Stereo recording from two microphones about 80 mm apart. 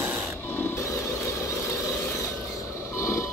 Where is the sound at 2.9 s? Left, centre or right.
Left.